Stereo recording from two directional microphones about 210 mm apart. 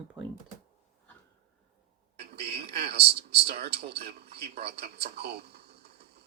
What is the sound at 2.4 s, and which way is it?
A man's voice, 50° right (ahead or behind).